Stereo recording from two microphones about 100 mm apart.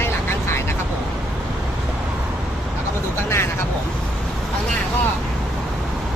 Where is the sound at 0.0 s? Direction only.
25° left (ahead or behind).